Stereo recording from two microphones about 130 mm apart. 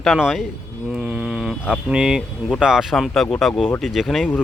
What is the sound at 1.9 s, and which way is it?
Speech, 5° right (ahead or behind).